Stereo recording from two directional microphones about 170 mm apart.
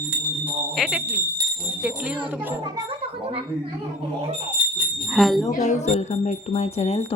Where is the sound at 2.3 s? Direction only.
10° right (ahead or behind).